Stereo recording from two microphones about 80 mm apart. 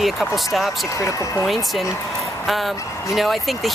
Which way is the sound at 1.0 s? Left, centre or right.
Left.